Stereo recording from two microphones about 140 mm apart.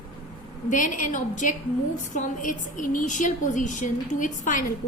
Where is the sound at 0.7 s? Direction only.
70° left (ahead or behind).